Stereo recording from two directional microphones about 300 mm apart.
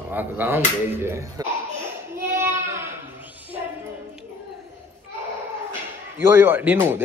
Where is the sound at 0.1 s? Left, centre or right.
Centre.